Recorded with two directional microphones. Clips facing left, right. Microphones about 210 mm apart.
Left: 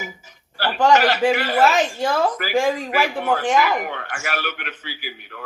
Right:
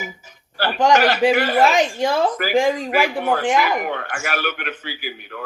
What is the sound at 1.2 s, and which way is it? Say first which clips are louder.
Speech: right 2 dB; 15° right (ahead or behind).